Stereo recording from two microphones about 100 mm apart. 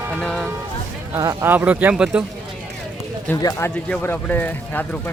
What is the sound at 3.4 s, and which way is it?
Speech, 40° left (ahead or behind).